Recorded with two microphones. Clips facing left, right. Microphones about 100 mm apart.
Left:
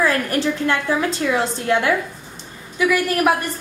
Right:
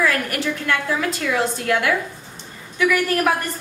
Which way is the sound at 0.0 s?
30° left (ahead or behind).